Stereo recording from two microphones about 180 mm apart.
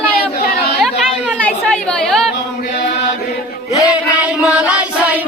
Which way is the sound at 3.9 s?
5° right (ahead or behind).